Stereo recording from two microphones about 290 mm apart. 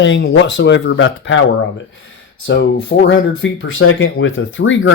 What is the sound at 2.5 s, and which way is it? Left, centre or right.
Speech, left.